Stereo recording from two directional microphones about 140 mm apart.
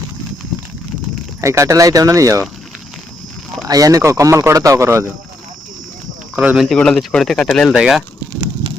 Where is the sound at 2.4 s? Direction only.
Centre (ahead or behind).